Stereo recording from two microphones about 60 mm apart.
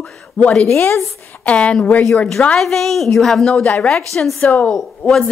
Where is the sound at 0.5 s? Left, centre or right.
Centre.